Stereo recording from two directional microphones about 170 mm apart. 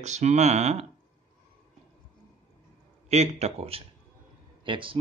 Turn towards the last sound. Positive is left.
turn(degrees=-30)  # may be behind; listen again after turning